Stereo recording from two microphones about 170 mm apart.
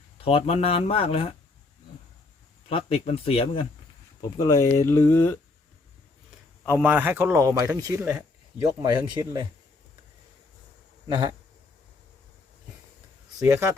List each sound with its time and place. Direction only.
0.3 s speech: 35° left (ahead or behind)
2.6 s speech: 35° left (ahead or behind)
4.2 s speech: 20° left (ahead or behind)
6.8 s speech: 10° right (ahead or behind); by 9.5 s 25° right (ahead or behind)
11.1 s speech: 25° right (ahead or behind)
13.5 s speech: 15° right (ahead or behind)